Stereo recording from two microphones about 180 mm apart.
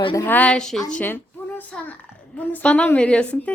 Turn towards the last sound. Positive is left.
turn(degrees=5)  # may be behind; listen again after turning